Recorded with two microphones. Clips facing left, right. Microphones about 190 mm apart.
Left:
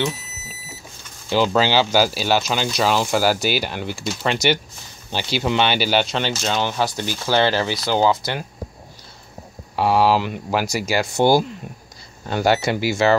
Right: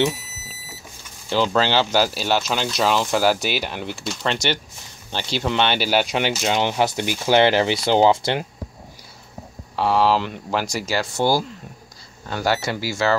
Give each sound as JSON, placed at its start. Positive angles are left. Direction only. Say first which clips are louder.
{"t": 1.3, "sound": "speech", "louder": "left 2 dB", "side_deg": 10}
{"t": 6.0, "sound": "speech", "louder": "right 1 dB", "side_deg": -15}
{"t": 9.8, "sound": "speech", "louder": "left 2 dB", "side_deg": 10}